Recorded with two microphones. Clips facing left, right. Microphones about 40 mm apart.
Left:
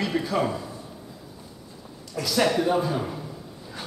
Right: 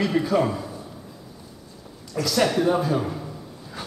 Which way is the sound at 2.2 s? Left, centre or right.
Centre.